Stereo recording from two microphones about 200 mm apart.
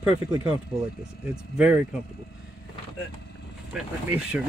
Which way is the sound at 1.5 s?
5° right (ahead or behind).